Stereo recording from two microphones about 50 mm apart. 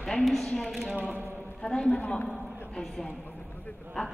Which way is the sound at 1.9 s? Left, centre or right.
Left.